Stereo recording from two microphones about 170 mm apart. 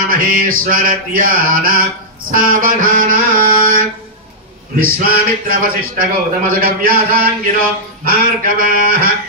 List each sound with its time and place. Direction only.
0.1 s speech: 55° right (ahead or behind)